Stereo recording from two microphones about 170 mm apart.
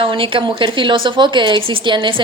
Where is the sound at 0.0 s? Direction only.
30° right (ahead or behind).